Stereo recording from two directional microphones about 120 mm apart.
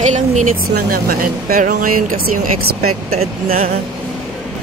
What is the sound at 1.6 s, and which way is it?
Speech, 90° right.